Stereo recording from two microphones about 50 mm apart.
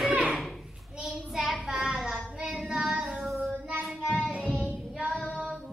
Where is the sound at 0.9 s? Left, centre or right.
Right.